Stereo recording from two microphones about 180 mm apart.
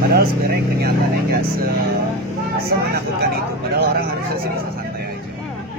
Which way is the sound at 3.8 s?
60° right (ahead or behind).